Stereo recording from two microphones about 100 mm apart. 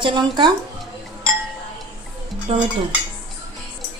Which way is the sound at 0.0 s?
50° right (ahead or behind).